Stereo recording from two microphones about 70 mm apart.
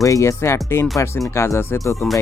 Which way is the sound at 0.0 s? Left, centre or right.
Left.